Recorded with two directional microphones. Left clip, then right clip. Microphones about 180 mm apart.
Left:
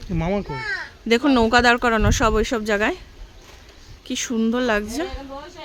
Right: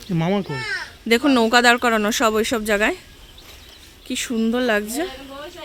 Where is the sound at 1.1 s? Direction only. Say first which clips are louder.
Right 1 dB; centre (ahead or behind).